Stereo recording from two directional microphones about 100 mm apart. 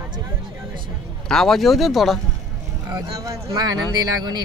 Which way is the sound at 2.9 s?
35° right (ahead or behind).